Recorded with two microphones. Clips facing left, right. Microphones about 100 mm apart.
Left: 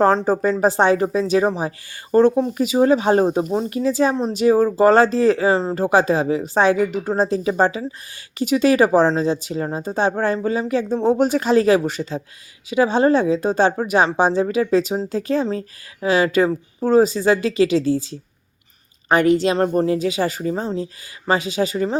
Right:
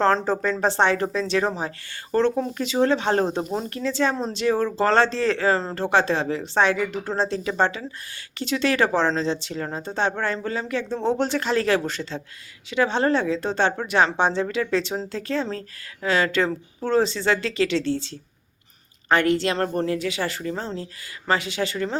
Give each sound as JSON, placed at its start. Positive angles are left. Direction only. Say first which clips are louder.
{"t": 0.0, "sound": "speech", "louder": "left 4 dB", "side_deg": 15}